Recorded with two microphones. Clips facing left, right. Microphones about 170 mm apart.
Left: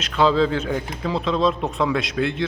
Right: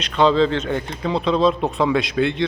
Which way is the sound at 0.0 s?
5° left (ahead or behind).